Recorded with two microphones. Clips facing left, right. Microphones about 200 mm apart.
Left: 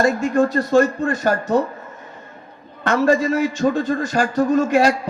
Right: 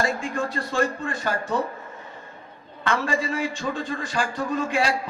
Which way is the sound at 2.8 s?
45° left (ahead or behind).